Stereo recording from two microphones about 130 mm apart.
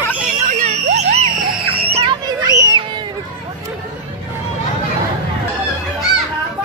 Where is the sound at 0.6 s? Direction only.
60° right (ahead or behind).